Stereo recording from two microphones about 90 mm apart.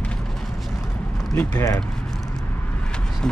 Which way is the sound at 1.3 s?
30° left (ahead or behind).